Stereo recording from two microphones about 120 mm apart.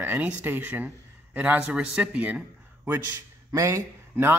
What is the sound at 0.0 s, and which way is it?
Speech, 15° right (ahead or behind).